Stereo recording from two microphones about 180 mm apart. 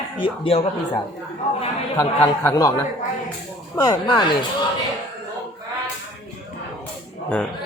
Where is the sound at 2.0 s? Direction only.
15° left (ahead or behind).